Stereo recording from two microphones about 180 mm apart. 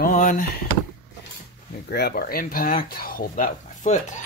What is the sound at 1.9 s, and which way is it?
Speech, 60° left (ahead or behind).